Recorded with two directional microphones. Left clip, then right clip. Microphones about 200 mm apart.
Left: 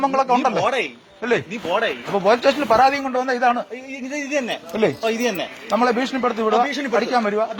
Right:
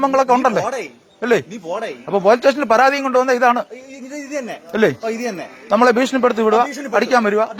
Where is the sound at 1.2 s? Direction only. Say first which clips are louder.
Right 4 dB; 55° right (ahead or behind).